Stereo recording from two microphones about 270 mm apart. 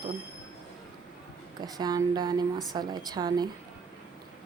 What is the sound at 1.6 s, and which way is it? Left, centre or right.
Speech, centre.